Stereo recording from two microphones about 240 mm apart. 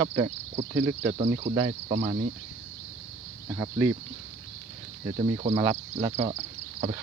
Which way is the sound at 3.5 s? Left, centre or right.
Centre.